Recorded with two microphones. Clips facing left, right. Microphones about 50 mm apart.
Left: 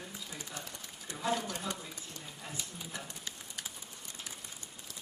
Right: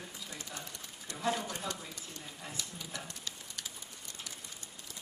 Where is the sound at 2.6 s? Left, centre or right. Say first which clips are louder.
Even; left.